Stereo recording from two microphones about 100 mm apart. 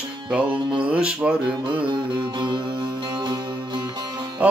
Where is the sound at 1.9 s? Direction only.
50° right (ahead or behind).